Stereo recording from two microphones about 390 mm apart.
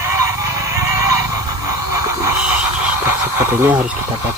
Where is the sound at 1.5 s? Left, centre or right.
Right.